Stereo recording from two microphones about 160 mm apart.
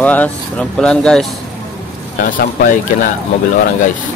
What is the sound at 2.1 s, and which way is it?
Speech, 60° left (ahead or behind).